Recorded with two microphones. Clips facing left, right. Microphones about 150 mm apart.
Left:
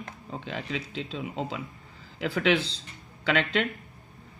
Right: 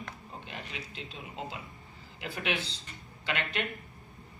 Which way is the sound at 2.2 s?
90° left.